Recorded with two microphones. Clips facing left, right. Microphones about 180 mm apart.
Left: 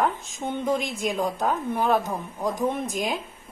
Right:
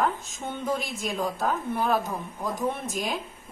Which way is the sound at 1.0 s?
20° left (ahead or behind).